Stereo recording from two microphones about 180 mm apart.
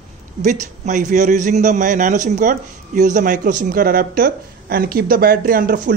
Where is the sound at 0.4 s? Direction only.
45° right (ahead or behind).